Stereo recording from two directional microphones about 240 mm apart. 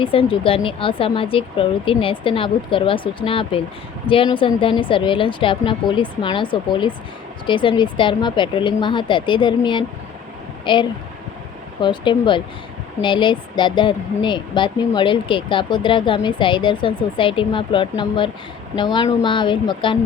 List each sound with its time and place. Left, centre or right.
0.0 s speech: left